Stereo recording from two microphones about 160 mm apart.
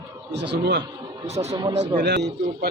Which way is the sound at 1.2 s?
45° right (ahead or behind).